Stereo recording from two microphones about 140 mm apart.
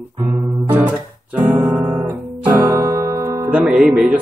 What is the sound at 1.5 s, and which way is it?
Guitar, 15° right (ahead or behind).